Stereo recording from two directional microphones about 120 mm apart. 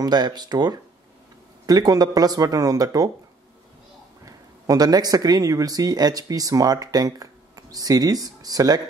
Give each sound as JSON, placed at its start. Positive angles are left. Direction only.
{"t": 0.0, "sound": "speech", "side_deg": -35}
{"t": 4.3, "sound": "speech", "side_deg": -30}